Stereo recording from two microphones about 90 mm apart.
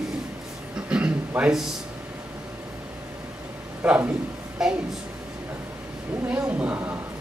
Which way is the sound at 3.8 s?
20° right (ahead or behind).